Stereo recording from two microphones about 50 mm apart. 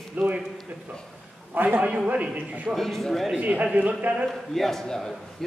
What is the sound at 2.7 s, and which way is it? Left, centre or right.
Speech, centre.